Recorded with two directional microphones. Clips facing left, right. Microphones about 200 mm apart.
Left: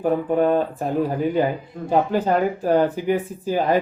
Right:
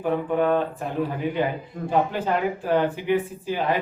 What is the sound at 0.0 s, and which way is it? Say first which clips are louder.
Speech: left 3 dB; 40° left (ahead or behind).